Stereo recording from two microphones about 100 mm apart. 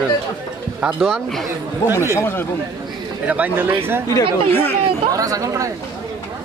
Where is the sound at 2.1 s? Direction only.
25° left (ahead or behind).